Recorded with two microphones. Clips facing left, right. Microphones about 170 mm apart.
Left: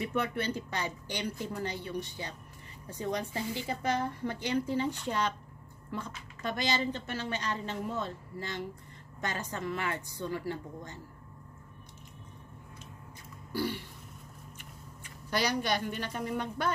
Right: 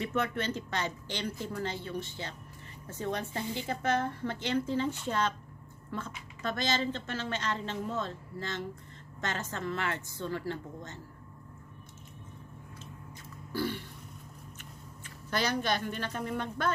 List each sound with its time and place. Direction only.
0.0 s a woman's voice: 10° left (ahead or behind)
13.5 s a sound: 15° left (ahead or behind)
15.2 s a woman's voice: 15° left (ahead or behind)